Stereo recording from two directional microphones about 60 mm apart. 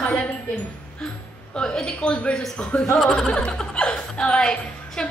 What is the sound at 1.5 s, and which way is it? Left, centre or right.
A woman's voice, centre.